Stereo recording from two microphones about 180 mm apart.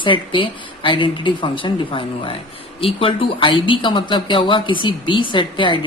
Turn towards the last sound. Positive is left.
turn(degrees=25)  # may be behind; listen again after turning